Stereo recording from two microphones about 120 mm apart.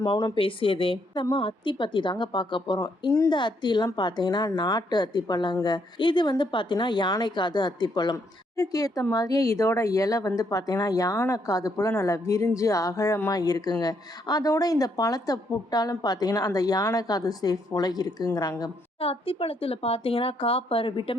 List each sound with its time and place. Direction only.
0.0 s a woman's voice: 35° left (ahead or behind)
18.9 s speech: 50° left (ahead or behind)